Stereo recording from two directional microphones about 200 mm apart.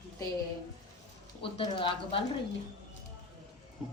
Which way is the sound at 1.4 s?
25° left (ahead or behind).